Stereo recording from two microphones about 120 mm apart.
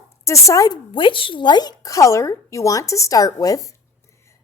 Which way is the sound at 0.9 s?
45° left (ahead or behind).